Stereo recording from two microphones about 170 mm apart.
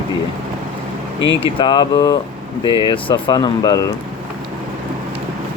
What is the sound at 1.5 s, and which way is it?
Speech, 25° left (ahead or behind).